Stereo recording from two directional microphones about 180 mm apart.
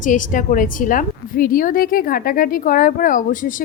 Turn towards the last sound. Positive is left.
turn(degrees=50)  # may be behind; listen again after turning